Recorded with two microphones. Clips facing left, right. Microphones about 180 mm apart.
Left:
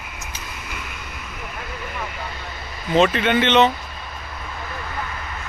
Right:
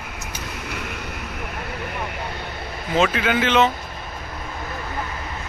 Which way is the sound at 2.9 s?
Centre (ahead or behind).